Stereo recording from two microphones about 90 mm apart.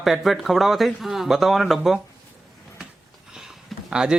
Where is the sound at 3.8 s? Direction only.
10° right (ahead or behind).